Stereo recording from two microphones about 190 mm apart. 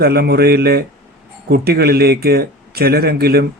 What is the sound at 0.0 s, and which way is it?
Speech, 55° right (ahead or behind).